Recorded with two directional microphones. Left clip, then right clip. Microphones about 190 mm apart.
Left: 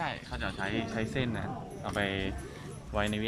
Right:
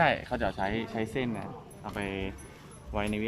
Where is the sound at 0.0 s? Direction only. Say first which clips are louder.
Right 9 dB; 45° right (ahead or behind); by 1.5 s 15° right (ahead or behind).